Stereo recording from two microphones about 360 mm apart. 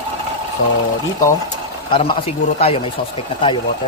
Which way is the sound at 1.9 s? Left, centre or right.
Centre.